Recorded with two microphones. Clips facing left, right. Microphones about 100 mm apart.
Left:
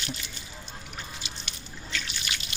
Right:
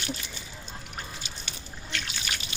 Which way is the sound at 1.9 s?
60° right (ahead or behind).